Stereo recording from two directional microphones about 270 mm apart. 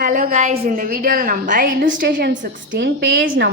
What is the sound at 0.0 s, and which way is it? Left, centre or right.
A woman's voice, right.